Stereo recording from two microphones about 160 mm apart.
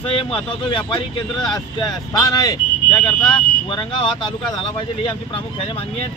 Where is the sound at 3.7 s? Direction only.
30° left (ahead or behind).